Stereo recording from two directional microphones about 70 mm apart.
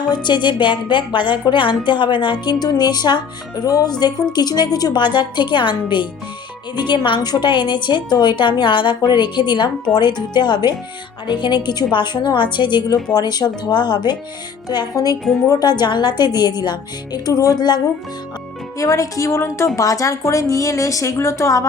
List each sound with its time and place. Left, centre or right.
0.1 s a woman's voice: left
4.0 s a woman's voice: left
6.7 s a woman's voice: left
14.7 s a woman's voice: left
18.8 s speech: left